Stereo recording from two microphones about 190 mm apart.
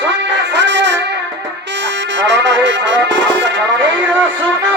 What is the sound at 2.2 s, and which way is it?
Music, 70° right (ahead or behind).